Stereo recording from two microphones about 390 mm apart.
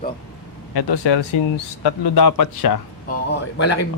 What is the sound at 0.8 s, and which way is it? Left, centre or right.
Speech, left.